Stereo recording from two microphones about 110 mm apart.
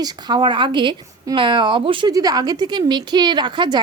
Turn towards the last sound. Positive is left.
turn(degrees=-45)  # may be behind; listen again after turning